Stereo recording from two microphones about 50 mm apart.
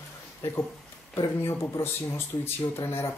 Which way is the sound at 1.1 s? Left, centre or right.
Left.